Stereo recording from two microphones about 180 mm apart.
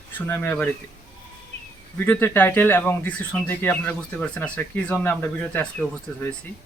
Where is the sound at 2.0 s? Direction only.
10° left (ahead or behind).